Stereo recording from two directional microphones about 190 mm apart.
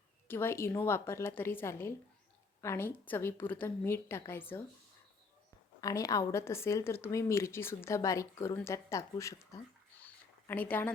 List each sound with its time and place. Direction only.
0.3 s a woman's voice: 10° left (ahead or behind)
5.8 s a woman's voice: 20° left (ahead or behind)
10.0 s a sound: 10° left (ahead or behind)